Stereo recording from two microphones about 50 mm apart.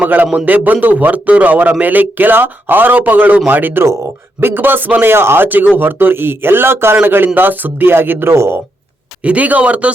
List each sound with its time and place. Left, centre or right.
0.0 s a man's voice: right
5.1 s speech: right
9.2 s a man's voice: right